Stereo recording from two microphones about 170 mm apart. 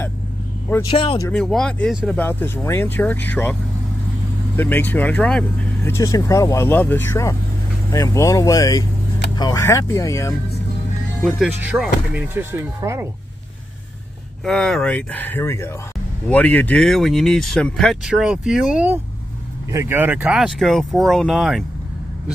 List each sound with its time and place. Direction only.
0.8 s speech: 35° left (ahead or behind)
1.3 s speech: 5° left (ahead or behind)
4.6 s speech: 10° left (ahead or behind)
5.9 s speech: 20° left (ahead or behind)
11.2 s speech: centre (ahead or behind)
14.4 s speech: 5° left (ahead or behind)